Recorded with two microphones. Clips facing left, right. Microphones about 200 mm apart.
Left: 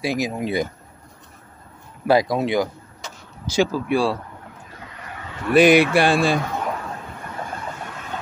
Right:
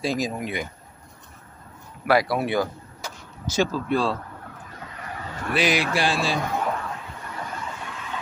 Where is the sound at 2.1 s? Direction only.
20° left (ahead or behind).